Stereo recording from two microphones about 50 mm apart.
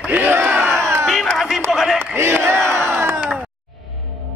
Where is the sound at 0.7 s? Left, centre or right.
Right.